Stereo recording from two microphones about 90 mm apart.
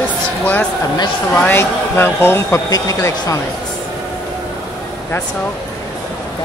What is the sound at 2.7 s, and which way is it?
Speech, 40° left (ahead or behind).